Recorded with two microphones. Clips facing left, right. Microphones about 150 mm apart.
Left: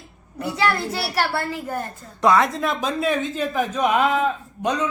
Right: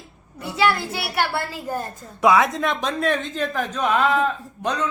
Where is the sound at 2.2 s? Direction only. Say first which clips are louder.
Even; centre (ahead or behind).